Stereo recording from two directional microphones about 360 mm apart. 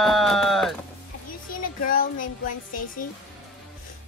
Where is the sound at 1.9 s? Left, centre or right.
Left.